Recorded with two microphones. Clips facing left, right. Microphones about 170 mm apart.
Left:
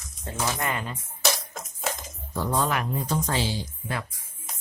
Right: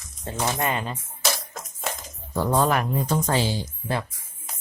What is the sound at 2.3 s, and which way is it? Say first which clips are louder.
Speech: right 5 dB; 50° right (ahead or behind).